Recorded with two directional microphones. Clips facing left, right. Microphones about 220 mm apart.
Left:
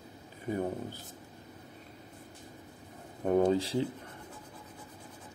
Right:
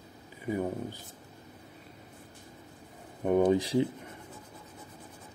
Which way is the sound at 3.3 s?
15° right (ahead or behind).